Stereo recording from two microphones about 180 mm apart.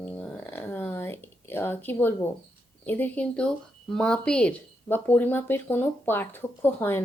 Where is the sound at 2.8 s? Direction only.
10° left (ahead or behind).